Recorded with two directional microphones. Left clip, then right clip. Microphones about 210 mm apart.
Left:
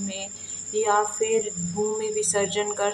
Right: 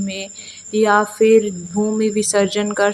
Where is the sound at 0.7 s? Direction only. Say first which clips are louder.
Right 7 dB; 30° right (ahead or behind).